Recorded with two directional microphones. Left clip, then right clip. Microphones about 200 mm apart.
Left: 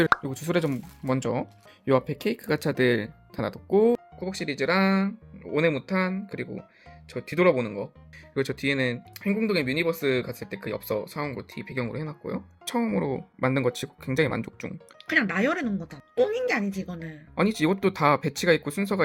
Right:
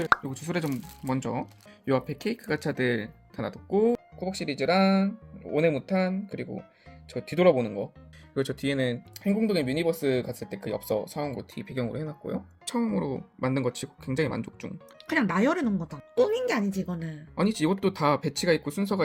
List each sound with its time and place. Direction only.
0.3 s speech: 30° left (ahead or behind)
4.2 s speech: 10° left (ahead or behind)
15.0 s speech: 45° right (ahead or behind)
17.3 s speech: 10° left (ahead or behind)